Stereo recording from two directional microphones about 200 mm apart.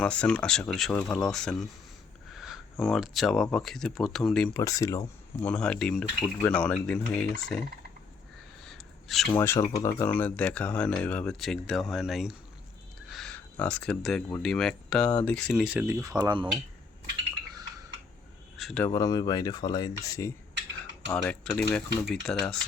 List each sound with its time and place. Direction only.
0.0 s speech: 5° left (ahead or behind)
4.5 s speech: 15° left (ahead or behind)
5.5 s speech: 5° left (ahead or behind)
8.6 s crow: centre (ahead or behind)
9.3 s speech: 15° left (ahead or behind); by 16.5 s 20° right (ahead or behind)
18.5 s insect: centre (ahead or behind)
18.9 s speech: 20° left (ahead or behind)
21.2 s speech: 5° left (ahead or behind)